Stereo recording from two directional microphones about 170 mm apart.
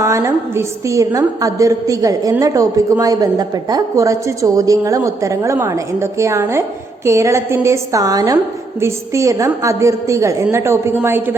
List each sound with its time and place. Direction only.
0.0 s a woman's voice: 15° right (ahead or behind)